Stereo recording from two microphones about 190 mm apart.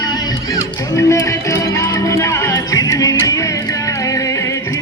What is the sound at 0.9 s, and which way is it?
Music, 15° left (ahead or behind).